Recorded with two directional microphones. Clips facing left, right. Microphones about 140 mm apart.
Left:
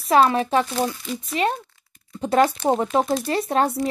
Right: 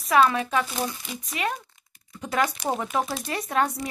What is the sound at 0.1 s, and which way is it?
Speech, 30° left (ahead or behind).